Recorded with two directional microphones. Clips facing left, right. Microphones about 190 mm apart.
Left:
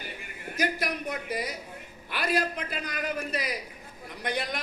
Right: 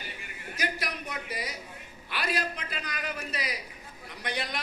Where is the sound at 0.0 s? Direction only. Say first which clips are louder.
Left 3 dB; 50° left (ahead or behind).